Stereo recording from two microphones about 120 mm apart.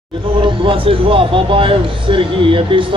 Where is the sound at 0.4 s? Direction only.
45° right (ahead or behind).